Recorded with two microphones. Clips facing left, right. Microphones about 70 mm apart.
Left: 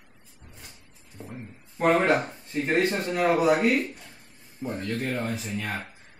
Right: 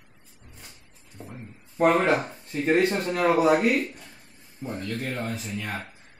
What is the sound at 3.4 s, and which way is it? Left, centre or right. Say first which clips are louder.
Speech: right 1 dB; centre.